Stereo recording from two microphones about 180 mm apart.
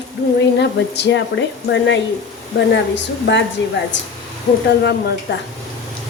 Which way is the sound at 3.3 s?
75° left (ahead or behind).